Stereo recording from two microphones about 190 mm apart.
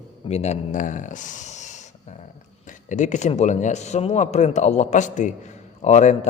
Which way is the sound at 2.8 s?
40° left (ahead or behind).